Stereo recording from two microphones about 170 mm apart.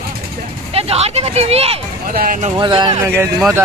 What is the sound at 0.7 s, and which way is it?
Speech, 35° right (ahead or behind).